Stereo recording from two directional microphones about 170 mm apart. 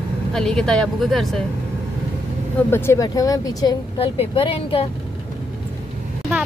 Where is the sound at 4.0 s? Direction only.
35° left (ahead or behind).